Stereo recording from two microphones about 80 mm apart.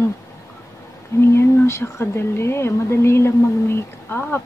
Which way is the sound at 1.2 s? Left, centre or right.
Left.